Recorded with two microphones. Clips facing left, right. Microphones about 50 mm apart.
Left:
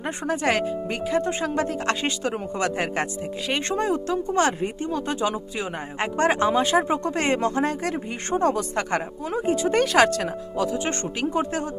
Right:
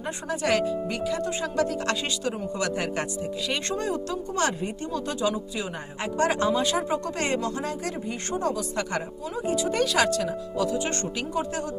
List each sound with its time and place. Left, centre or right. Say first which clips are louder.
0.3 s speech: left 1 dB; left